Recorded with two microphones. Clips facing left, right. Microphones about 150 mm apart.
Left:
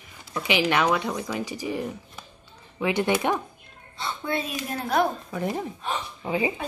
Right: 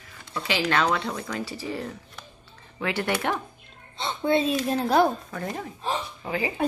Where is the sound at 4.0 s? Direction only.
25° right (ahead or behind).